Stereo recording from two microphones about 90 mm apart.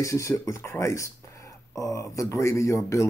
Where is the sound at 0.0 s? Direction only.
35° left (ahead or behind).